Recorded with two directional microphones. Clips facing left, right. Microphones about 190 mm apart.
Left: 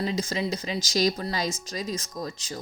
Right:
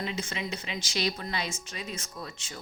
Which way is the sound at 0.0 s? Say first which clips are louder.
Left 6 dB; 35° left (ahead or behind).